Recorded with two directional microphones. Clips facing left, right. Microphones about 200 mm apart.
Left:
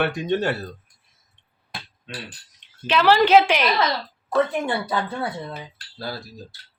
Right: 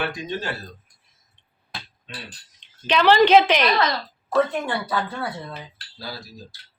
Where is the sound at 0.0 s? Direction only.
65° left (ahead or behind).